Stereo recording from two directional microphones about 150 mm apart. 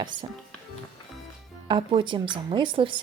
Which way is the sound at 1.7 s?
35° right (ahead or behind).